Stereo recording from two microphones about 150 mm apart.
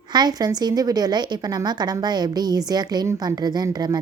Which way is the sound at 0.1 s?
25° right (ahead or behind).